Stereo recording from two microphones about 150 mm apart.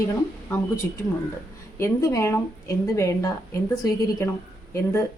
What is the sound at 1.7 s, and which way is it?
Speech, 20° left (ahead or behind).